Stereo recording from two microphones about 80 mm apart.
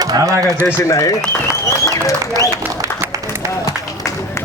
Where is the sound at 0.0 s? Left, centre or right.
Right.